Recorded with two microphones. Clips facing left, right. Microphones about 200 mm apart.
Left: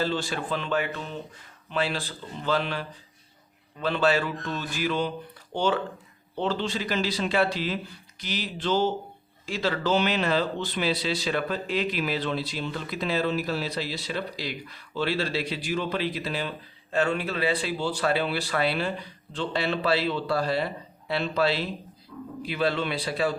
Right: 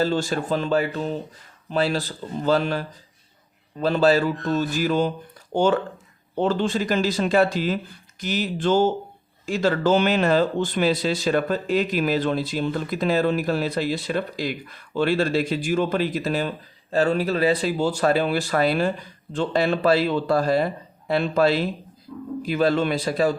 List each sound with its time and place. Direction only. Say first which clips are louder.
0.0 s speech: right 6 dB; 45° right (ahead or behind)
22.1 s speech: right 4 dB; 25° right (ahead or behind)
22.4 s speech: right 6 dB; 45° right (ahead or behind)